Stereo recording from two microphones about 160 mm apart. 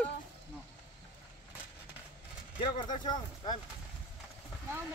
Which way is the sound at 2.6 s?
30° left (ahead or behind).